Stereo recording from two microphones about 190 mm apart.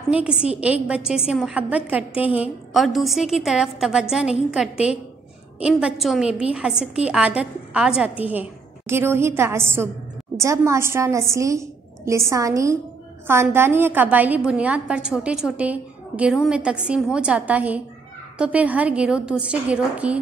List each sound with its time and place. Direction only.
0.1 s a woman's voice: 5° right (ahead or behind)